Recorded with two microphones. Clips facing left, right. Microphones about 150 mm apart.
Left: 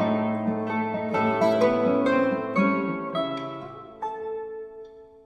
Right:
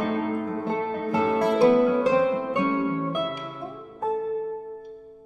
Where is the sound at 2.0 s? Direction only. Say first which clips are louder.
Right 1 dB; 10° right (ahead or behind).